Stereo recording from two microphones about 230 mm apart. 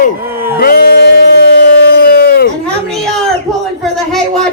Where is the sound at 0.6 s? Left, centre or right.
Left.